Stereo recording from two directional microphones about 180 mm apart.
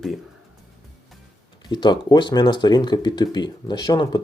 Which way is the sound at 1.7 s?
25° left (ahead or behind).